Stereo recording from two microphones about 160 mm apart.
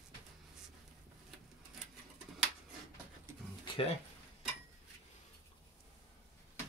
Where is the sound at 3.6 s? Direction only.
35° left (ahead or behind).